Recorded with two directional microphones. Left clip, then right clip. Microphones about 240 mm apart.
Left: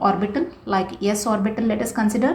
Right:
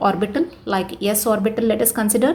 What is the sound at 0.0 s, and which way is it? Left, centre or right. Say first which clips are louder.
A woman's voice: right 1 dB; right.